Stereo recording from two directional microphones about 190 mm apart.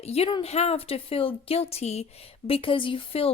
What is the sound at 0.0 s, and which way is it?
A woman's voice, 30° left (ahead or behind).